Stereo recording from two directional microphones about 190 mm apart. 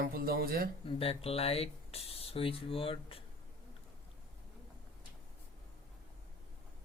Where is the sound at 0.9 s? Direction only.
30° left (ahead or behind).